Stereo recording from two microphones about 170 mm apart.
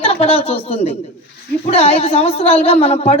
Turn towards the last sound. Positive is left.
turn(degrees=35)  # may be behind; listen again after turning